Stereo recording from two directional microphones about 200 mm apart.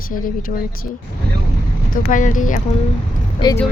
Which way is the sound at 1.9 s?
40° left (ahead or behind).